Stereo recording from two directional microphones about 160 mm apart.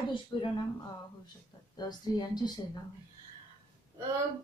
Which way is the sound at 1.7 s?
25° left (ahead or behind).